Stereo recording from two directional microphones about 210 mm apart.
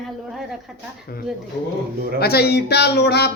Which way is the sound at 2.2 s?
50° left (ahead or behind).